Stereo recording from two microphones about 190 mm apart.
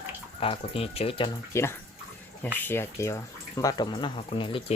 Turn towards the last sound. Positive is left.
turn(degrees=30)  # may be behind; listen again after turning